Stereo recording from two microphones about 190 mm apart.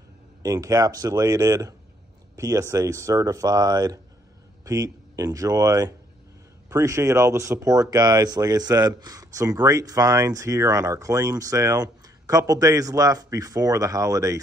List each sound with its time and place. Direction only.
0.4 s speech: 20° right (ahead or behind)